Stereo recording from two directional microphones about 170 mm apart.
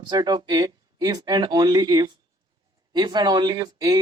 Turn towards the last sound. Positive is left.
turn(degrees=-20)  # may be behind; listen again after turning